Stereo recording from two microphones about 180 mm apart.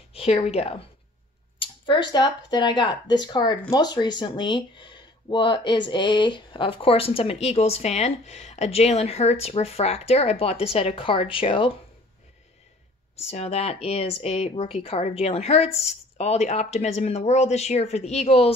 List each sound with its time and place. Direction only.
0.1 s a woman's voice: 35° left (ahead or behind)
13.3 s speech: 35° left (ahead or behind)